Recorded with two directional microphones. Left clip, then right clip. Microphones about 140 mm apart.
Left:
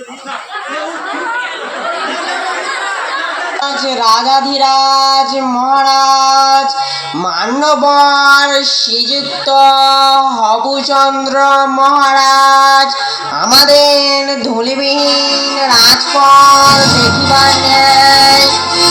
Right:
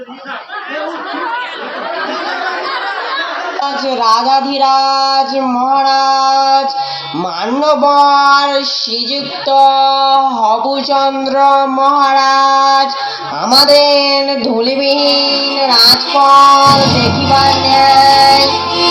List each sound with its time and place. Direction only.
3.6 s speech: 35° right (ahead or behind)
5.4 s child singing: 15° right (ahead or behind)
6.0 s child singing: 45° right (ahead or behind)
8.0 s speech: 40° right (ahead or behind)
13.4 s child singing: 45° right (ahead or behind)
18.3 s music: 40° right (ahead or behind)